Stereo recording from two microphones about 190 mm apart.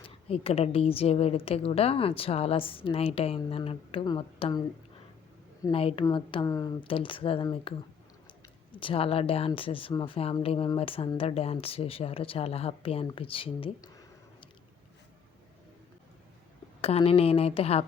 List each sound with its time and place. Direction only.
0.0 s a woman's voice: 30° left (ahead or behind)
5.7 s speech: 30° left (ahead or behind)
16.8 s a woman's voice: 30° left (ahead or behind)